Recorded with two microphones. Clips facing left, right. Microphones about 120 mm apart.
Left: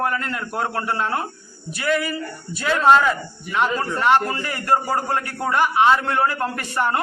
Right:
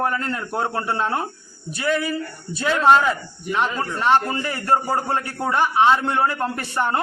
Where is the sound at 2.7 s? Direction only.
10° right (ahead or behind).